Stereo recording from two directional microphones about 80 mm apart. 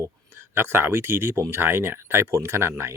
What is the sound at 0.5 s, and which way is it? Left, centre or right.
Speech, right.